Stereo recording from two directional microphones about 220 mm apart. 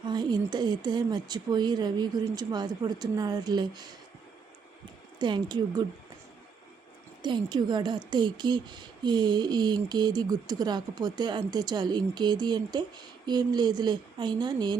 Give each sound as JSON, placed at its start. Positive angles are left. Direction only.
{"t": 0.0, "sound": "speech", "side_deg": -20}
{"t": 5.2, "sound": "speech", "side_deg": -20}
{"t": 7.2, "sound": "speech", "side_deg": -20}